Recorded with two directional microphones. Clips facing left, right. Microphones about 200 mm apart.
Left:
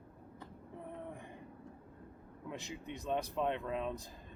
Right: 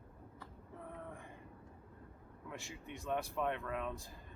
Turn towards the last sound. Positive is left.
turn(degrees=20)  # may be behind; listen again after turning